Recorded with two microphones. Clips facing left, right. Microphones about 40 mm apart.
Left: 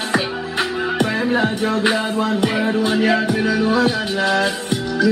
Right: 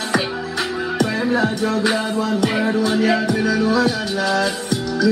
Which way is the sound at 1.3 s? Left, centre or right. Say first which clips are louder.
Even; left.